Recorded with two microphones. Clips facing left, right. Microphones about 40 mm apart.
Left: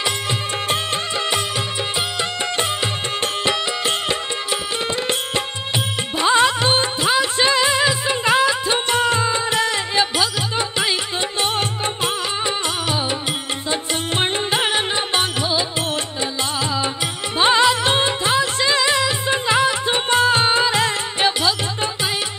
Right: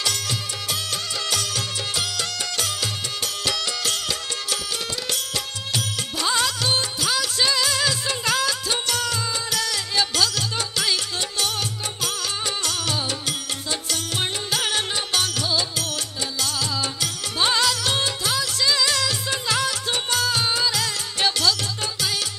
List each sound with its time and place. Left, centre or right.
2.5 s music: left
6.1 s music: left
11.4 s music: left
17.4 s music: left